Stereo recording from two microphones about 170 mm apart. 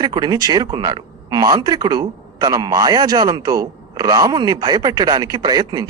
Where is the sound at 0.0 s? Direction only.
20° right (ahead or behind).